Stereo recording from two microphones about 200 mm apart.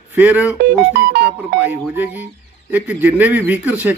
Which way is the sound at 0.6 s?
55° right (ahead or behind).